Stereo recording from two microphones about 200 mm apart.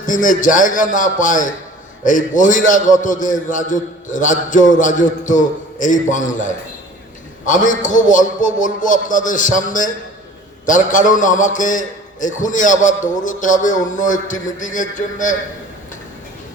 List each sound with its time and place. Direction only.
0.0 s a man's voice: 40° left (ahead or behind)